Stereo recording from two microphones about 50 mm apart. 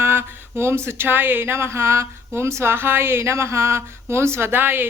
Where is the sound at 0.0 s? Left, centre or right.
Right.